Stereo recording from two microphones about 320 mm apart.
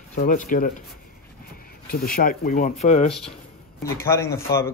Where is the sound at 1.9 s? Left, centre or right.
Left.